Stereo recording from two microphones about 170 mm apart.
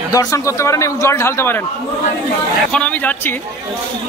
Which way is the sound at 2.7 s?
10° left (ahead or behind).